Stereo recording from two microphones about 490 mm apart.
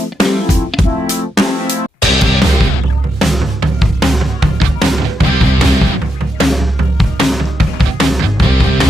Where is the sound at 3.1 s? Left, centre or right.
Centre.